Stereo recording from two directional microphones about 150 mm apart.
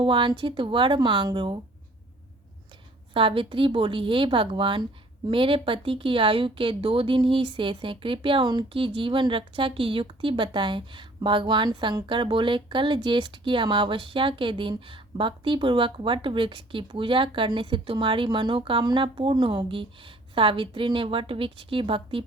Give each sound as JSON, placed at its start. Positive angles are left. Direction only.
{"t": 0.0, "sound": "speech", "side_deg": -35}
{"t": 3.1, "sound": "speech", "side_deg": -35}